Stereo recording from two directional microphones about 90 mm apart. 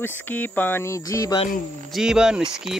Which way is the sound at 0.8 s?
35° left (ahead or behind).